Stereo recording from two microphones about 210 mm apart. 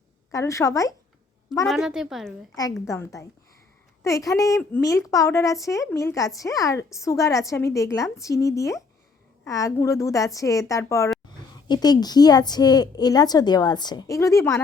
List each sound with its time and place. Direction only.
0.3 s a woman's voice: 15° left (ahead or behind)
1.6 s a woman's voice: centre (ahead or behind)
2.8 s a woman's voice: 15° left (ahead or behind)